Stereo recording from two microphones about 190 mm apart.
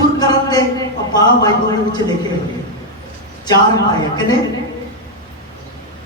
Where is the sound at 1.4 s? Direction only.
20° left (ahead or behind).